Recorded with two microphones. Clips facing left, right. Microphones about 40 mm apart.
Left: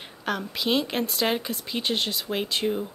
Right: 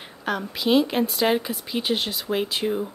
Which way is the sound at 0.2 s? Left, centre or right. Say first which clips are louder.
Right 2 dB; centre.